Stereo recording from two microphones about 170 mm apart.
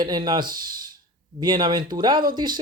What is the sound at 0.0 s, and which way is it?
Speech, 25° right (ahead or behind).